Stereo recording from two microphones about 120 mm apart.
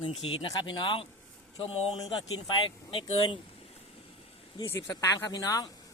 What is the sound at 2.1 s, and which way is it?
Speech, 40° left (ahead or behind).